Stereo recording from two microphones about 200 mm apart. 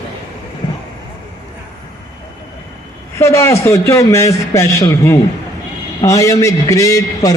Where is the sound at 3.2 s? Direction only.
15° left (ahead or behind).